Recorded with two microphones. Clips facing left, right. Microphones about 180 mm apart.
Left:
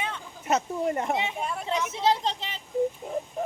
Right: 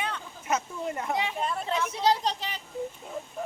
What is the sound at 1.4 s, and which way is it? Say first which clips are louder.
Speech: even; 10° left (ahead or behind).